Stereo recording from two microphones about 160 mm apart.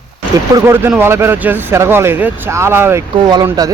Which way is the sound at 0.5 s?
15° right (ahead or behind).